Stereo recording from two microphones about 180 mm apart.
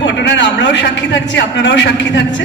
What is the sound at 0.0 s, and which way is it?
A man's voice, 80° left.